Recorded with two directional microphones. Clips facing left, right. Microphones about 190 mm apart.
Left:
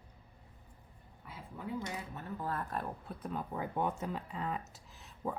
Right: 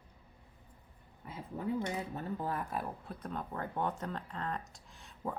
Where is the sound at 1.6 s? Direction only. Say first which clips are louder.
Right 6 dB; 40° right (ahead or behind).